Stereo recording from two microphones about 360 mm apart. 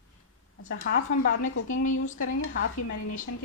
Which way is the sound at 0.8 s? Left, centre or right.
Left.